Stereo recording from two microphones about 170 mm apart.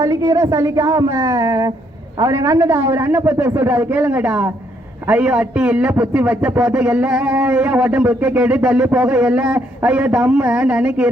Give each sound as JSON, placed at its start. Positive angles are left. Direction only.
{"t": 0.0, "sound": "a woman's voice", "side_deg": -20}